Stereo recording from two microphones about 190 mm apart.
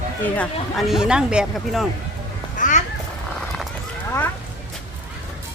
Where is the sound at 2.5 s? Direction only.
40° left (ahead or behind).